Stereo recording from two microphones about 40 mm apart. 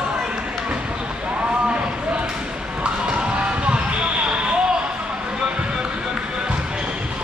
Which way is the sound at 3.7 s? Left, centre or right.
Right.